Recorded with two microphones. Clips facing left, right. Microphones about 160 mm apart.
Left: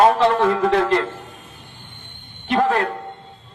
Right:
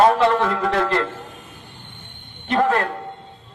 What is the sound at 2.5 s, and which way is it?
Speech, 15° left (ahead or behind).